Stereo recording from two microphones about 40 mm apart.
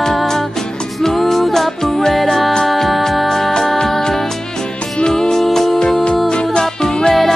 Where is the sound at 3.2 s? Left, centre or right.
Centre.